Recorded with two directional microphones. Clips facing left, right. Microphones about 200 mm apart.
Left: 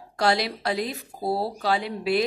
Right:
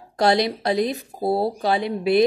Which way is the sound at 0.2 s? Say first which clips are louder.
Right 5 dB; 20° right (ahead or behind).